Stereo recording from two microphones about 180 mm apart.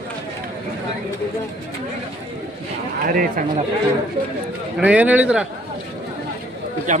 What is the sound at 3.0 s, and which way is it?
Speech, 50° right (ahead or behind).